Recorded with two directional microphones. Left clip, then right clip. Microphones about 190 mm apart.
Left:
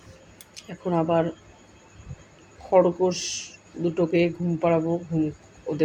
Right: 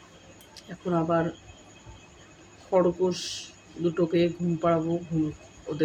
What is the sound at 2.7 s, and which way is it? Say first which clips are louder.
Speech: left 4 dB; 15° left (ahead or behind).